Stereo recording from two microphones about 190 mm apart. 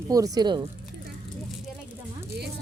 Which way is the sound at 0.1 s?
20° right (ahead or behind).